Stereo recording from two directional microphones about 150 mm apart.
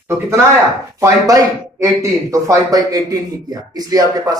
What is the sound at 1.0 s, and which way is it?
Speech, 20° right (ahead or behind).